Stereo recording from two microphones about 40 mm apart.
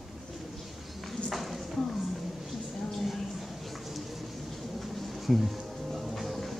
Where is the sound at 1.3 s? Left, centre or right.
Centre.